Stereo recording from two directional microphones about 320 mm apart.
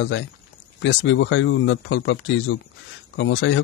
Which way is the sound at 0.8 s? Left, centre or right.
Left.